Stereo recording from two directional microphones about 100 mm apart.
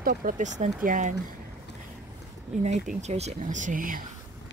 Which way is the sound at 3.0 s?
90° right.